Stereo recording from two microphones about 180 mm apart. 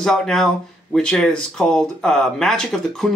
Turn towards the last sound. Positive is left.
turn(degrees=0)  # may be behind; listen again after turning